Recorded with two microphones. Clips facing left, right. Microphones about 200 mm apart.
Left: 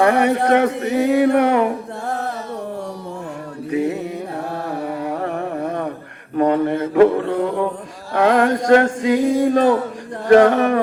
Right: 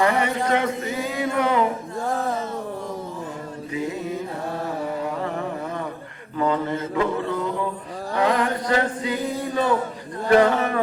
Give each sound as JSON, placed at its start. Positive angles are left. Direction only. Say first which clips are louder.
{"t": 0.0, "sound": "speech", "louder": "left 6 dB", "side_deg": 65}
{"t": 3.7, "sound": "mantra", "louder": "left 7 dB", "side_deg": 65}
{"t": 4.7, "sound": "a sound", "louder": "left 4 dB", "side_deg": 65}
{"t": 6.3, "sound": "mantra", "louder": "left 6 dB", "side_deg": 60}
{"t": 8.1, "sound": "male singing", "louder": "left 6 dB", "side_deg": 90}
{"t": 10.2, "sound": "speech", "louder": "left 6 dB", "side_deg": 70}